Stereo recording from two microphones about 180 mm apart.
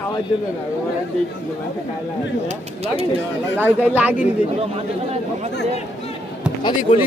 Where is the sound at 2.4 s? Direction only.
35° right (ahead or behind).